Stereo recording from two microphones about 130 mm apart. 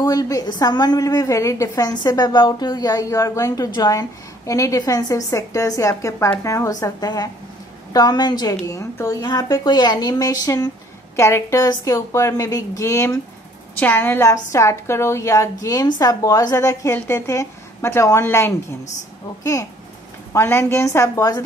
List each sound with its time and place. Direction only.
0.0 s a woman's voice: 25° left (ahead or behind)
20.3 s a woman's voice: 20° left (ahead or behind)